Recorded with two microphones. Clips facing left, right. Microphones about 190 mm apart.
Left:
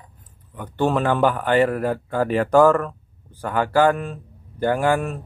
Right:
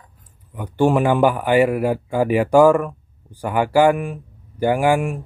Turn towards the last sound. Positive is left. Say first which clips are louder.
# right 3 dB
turn(degrees=-10)  # may be behind; listen again after turning